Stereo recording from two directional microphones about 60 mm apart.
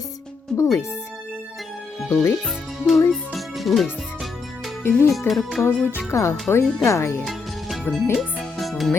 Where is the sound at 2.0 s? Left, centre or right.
Left.